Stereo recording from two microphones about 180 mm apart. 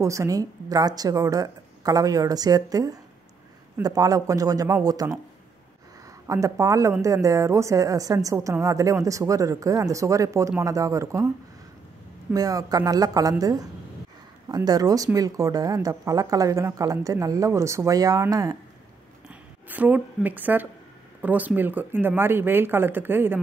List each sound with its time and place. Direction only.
0.0 s a woman's voice: 15° right (ahead or behind)
6.2 s a woman's voice: 15° right (ahead or behind)
12.3 s a woman's voice: 20° right (ahead or behind)
19.2 s a woman's voice: 10° right (ahead or behind)